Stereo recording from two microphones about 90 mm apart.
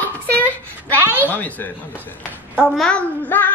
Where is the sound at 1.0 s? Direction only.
20° right (ahead or behind).